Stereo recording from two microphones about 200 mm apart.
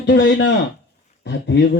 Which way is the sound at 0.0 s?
60° left (ahead or behind).